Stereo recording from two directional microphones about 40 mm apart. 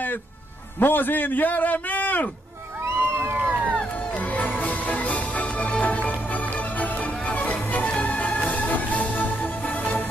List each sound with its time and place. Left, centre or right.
0.7 s a man's voice: left
2.8 s a sound: right
3.3 s music: right
4.1 s music: left